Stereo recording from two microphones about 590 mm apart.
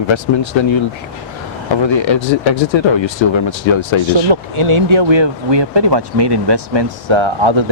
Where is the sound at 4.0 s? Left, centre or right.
Right.